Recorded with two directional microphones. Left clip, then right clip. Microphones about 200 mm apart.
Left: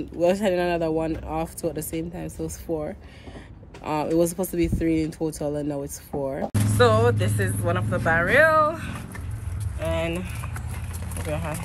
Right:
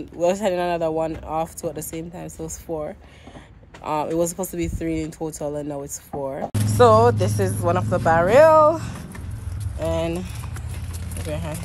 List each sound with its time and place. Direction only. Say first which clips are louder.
0.2 s speech: right 1 dB; 10° left (ahead or behind)
6.5 s a sound: even; centre (ahead or behind)
6.8 s speech: right 5 dB; 10° right (ahead or behind)
11.1 s speech: even; 5° right (ahead or behind)